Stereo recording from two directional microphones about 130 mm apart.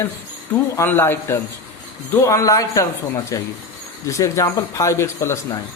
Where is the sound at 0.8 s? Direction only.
20° left (ahead or behind).